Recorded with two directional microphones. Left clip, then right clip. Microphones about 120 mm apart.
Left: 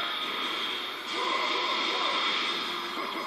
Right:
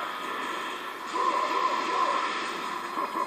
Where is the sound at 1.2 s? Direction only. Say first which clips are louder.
Right 3 dB; 25° left (ahead or behind).